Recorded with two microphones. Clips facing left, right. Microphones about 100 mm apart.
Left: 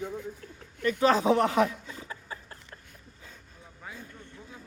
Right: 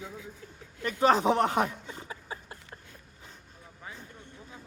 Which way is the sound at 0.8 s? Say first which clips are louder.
Even; 25° right (ahead or behind).